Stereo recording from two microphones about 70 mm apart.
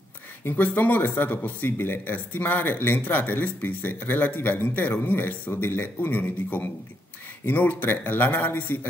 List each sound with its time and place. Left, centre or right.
0.5 s speech: left